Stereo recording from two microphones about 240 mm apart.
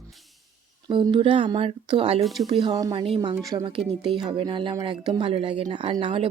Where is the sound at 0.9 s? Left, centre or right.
Centre.